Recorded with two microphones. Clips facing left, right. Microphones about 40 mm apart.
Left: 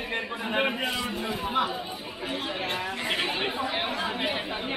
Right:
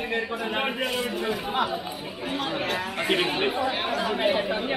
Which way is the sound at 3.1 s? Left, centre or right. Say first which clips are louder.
Right 5 dB; centre.